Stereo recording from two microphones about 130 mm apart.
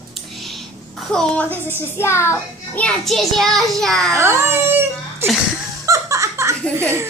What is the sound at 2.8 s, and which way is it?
A child's voice, centre (ahead or behind).